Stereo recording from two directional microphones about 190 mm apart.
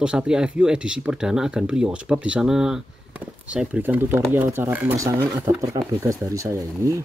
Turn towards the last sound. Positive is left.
turn(degrees=-15)  # may be behind; listen again after turning